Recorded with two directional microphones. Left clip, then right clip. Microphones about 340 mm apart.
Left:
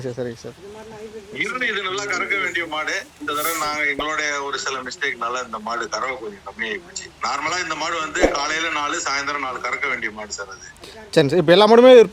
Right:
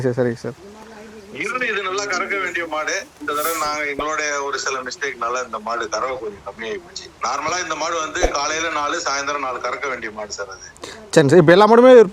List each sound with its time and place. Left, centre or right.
0.0 s speech: right
1.4 s a man's voice: centre
11.1 s a man's voice: right